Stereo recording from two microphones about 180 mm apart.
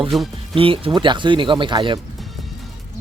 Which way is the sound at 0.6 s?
30° right (ahead or behind).